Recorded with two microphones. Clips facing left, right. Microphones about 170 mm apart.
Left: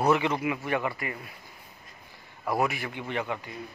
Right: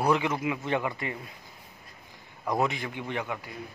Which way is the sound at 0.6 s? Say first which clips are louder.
Even; 20° right (ahead or behind).